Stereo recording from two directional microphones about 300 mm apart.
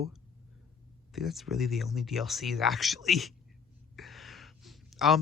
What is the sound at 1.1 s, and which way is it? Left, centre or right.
Speech, centre.